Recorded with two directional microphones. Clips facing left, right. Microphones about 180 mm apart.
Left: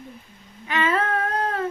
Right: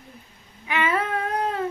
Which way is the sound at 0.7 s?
10° right (ahead or behind).